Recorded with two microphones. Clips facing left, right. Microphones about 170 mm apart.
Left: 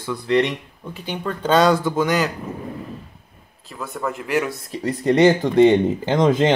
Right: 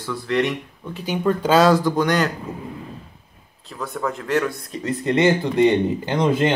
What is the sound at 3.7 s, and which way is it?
Speech, centre (ahead or behind).